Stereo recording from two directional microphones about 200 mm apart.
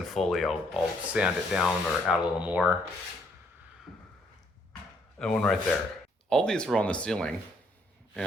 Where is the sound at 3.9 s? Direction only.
5° right (ahead or behind).